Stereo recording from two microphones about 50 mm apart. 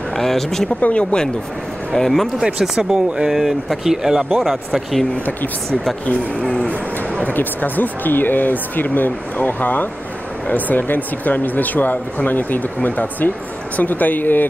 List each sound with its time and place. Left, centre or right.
0.1 s speech: centre
0.7 s speech: left
1.9 s speech: centre
2.6 s speech: centre
4.4 s speech: centre
7.3 s speech: left